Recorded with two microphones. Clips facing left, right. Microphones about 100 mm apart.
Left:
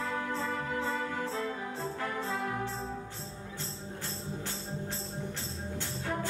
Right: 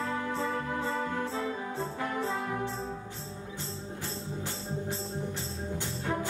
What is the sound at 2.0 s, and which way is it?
Brass instrument, 15° right (ahead or behind).